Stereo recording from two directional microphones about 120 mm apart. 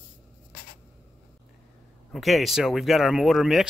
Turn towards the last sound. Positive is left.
turn(degrees=0)  # may be behind; listen again after turning